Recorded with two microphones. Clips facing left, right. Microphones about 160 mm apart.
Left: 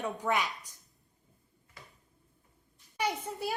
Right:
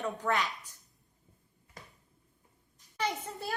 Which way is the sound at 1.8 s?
45° right (ahead or behind).